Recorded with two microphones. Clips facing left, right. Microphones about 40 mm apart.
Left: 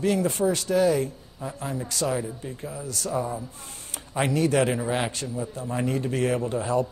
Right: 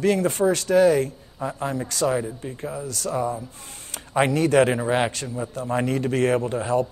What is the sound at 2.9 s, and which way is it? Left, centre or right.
A man's voice, right.